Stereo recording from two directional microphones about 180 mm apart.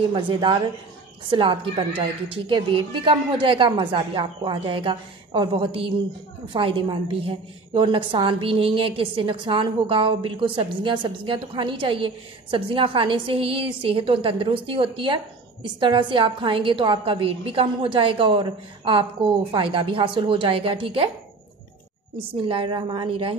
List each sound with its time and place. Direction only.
0.1 s a woman's voice: 25° right (ahead or behind)
22.4 s a woman's voice: 30° right (ahead or behind)